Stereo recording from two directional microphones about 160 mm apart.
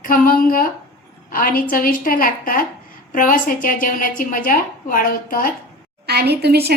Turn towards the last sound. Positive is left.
turn(degrees=-85)